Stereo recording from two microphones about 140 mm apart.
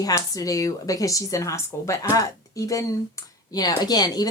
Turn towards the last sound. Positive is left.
turn(degrees=30)  # may be behind; listen again after turning